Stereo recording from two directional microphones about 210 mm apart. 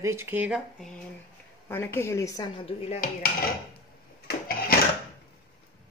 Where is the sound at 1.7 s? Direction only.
10° left (ahead or behind).